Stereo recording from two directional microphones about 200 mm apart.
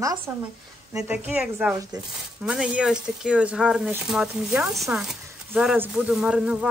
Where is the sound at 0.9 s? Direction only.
10° right (ahead or behind).